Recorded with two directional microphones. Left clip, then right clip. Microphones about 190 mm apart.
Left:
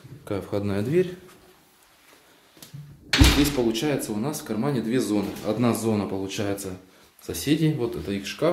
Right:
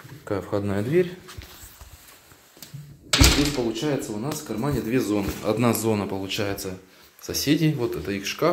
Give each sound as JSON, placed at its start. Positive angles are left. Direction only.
{"t": 0.2, "sound": "speech", "side_deg": 10}
{"t": 3.5, "sound": "speech", "side_deg": 15}
{"t": 4.5, "sound": "speech", "side_deg": 0}